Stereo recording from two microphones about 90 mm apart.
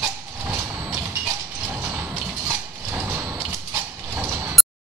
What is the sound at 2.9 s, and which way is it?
Mechanisms, 15° right (ahead or behind).